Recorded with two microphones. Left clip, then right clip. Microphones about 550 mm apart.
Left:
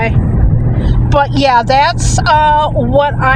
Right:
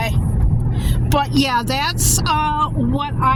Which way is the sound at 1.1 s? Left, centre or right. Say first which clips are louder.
Left 8 dB; right.